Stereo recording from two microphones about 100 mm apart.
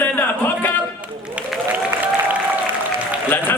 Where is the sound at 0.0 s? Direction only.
20° left (ahead or behind).